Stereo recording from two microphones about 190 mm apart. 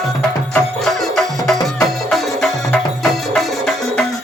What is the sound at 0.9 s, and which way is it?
Music, centre (ahead or behind).